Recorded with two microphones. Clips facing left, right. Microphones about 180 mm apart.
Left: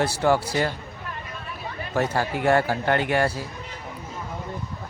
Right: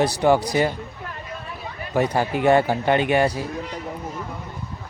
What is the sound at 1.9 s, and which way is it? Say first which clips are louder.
Speech: right 3 dB; 15° right (ahead or behind).